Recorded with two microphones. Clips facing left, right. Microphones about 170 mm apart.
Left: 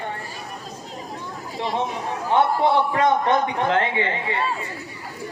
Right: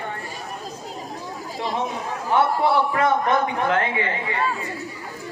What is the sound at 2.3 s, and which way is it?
A man's voice, 20° left (ahead or behind).